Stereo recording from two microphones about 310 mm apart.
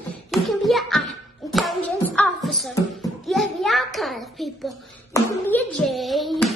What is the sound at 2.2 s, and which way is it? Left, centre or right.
A child's voice, centre.